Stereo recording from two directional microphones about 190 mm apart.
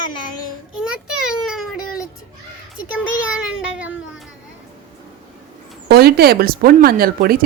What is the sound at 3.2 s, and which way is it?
Child singing, 5° right (ahead or behind).